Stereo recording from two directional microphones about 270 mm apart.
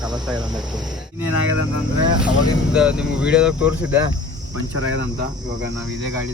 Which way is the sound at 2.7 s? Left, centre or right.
Centre.